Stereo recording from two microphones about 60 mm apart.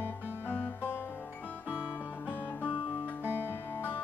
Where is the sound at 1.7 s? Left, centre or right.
Centre.